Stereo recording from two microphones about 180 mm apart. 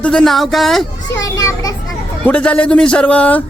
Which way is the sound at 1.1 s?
15° left (ahead or behind).